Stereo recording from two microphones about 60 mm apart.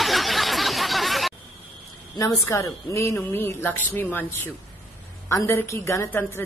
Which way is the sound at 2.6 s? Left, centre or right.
Left.